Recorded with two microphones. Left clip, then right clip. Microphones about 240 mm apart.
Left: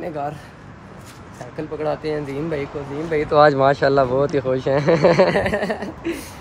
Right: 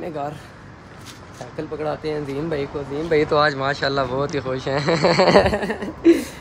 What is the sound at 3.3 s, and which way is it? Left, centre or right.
Speech, centre.